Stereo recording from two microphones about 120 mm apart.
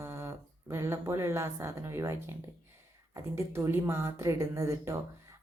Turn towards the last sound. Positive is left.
turn(degrees=-25)  # may be behind; listen again after turning